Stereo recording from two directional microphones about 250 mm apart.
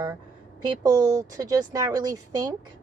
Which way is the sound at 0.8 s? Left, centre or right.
Centre.